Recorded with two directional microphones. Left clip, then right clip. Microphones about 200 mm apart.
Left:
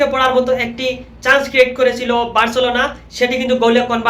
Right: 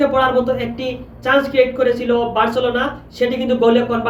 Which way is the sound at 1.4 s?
20° right (ahead or behind).